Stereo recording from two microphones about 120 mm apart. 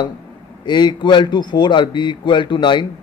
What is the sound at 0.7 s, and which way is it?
A man's voice, 40° left (ahead or behind).